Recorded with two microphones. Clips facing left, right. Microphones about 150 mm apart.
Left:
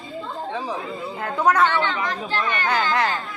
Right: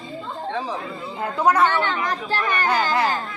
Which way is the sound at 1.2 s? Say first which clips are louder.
Right 1 dB; 10° right (ahead or behind).